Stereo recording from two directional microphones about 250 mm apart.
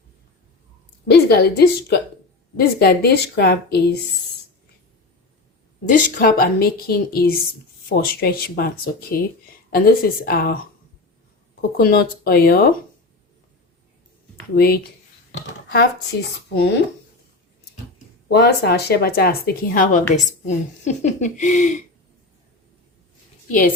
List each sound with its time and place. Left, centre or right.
1.1 s speech: left
5.9 s speech: left
11.8 s speech: left
14.5 s speech: left
18.3 s speech: left